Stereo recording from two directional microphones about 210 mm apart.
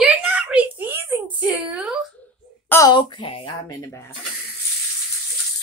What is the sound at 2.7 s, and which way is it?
Speech, 20° left (ahead or behind).